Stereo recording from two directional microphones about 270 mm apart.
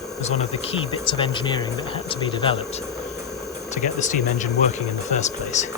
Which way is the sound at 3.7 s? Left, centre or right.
Left.